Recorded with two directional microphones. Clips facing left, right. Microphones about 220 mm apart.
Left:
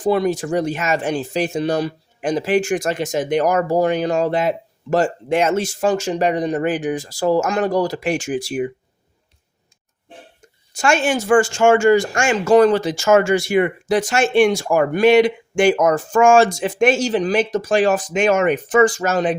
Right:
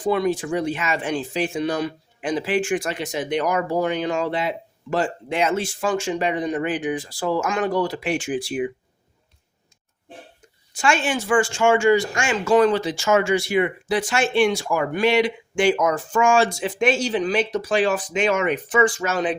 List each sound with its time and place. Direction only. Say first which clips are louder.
0.0 s speech: left 3 dB; 40° left (ahead or behind)
10.8 s speech: left 4 dB; 45° left (ahead or behind)